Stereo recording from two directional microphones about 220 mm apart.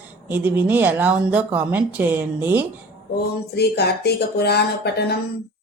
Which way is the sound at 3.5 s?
50° left (ahead or behind).